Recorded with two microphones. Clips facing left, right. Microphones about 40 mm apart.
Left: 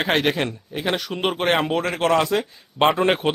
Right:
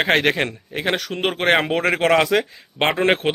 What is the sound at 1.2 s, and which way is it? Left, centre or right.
Speech, right.